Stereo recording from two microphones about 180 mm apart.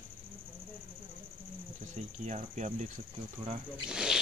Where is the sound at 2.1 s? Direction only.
40° right (ahead or behind).